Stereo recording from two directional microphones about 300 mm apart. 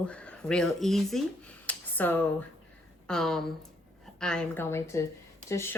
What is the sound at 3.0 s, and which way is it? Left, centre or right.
Speech, centre.